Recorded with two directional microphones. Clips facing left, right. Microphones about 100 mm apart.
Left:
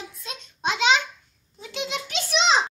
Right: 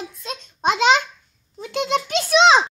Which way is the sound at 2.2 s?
90° right.